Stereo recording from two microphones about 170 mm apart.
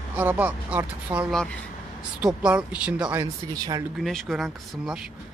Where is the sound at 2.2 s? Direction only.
5° right (ahead or behind).